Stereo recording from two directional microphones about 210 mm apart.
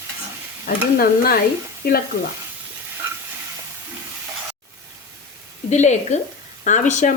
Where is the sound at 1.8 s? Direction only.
50° left (ahead or behind).